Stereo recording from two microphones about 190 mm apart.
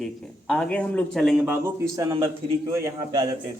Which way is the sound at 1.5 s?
15° right (ahead or behind).